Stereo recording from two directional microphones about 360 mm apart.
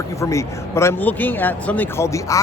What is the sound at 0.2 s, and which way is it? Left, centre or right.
A man's voice, centre.